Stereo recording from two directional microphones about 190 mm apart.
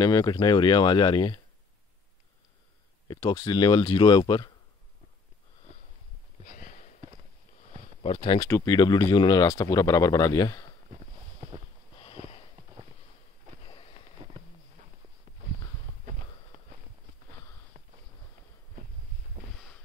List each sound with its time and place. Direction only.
0.0 s speech: 20° left (ahead or behind)
3.1 s speech: 20° left (ahead or behind)
6.4 s sniff: 45° left (ahead or behind)
8.0 s speech: 30° left (ahead or behind)
12.0 s sniff: 30° left (ahead or behind)
13.7 s a sound: 30° left (ahead or behind)
19.5 s a sound: 5° left (ahead or behind)